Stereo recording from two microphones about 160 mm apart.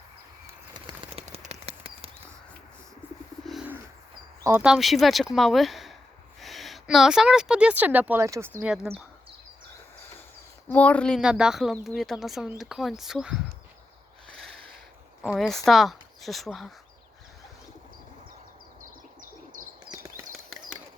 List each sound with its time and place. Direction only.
0.7 s bird flight: 30° right (ahead or behind)
4.6 s speech: centre (ahead or behind)
8.6 s speech: 5° right (ahead or behind)
10.7 s speech: 10° left (ahead or behind)
14.3 s a sound: 5° left (ahead or behind)
15.2 s speech: centre (ahead or behind)
19.9 s a sound: 20° right (ahead or behind)